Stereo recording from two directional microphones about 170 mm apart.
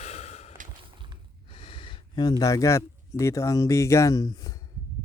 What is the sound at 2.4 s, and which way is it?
Speech, 20° left (ahead or behind).